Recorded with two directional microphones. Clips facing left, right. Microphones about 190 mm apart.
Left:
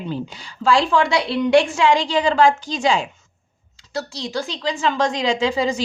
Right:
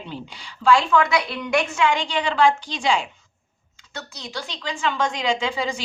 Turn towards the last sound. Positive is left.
turn(degrees=40)  # may be behind; listen again after turning